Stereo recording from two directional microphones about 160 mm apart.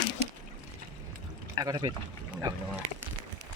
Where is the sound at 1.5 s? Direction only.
25° right (ahead or behind).